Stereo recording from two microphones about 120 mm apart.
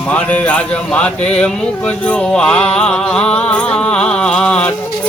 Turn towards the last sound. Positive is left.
turn(degrees=10)  # may be behind; listen again after turning